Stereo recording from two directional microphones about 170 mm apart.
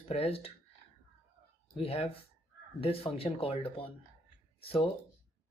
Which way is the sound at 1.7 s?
35° left (ahead or behind).